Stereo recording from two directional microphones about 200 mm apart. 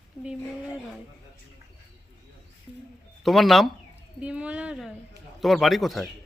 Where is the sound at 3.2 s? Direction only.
Centre (ahead or behind).